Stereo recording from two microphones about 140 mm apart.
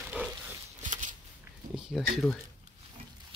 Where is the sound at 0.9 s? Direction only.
65° right (ahead or behind).